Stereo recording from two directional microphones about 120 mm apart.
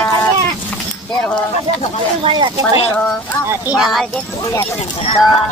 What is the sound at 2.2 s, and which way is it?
Speech, 40° right (ahead or behind).